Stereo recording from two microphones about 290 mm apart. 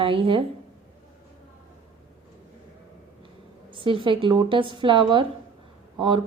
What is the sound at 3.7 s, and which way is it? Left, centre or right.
A woman's voice, centre.